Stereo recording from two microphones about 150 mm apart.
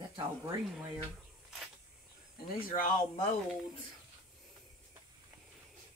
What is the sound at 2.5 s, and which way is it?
Speech, 65° left (ahead or behind).